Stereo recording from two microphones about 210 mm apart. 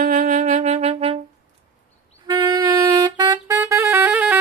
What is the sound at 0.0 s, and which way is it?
Music, 40° right (ahead or behind).